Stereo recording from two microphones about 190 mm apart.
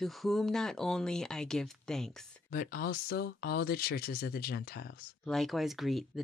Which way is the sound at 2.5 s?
50° left (ahead or behind).